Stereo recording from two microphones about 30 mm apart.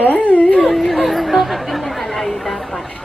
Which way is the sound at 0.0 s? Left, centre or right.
Left.